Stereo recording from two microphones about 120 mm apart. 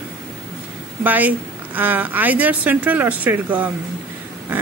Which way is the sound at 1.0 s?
15° right (ahead or behind).